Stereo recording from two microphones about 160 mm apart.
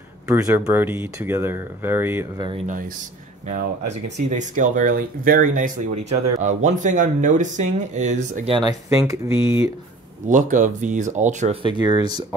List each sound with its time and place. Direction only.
0.3 s speech: 15° right (ahead or behind)
3.4 s speech: 50° right (ahead or behind)
8.5 s speech: 25° right (ahead or behind)
10.2 s speech: 50° right (ahead or behind)
11.6 s speech: 30° right (ahead or behind)